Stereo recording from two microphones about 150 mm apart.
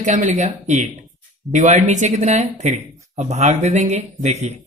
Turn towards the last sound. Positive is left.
turn(degrees=-50)  # may be behind; listen again after turning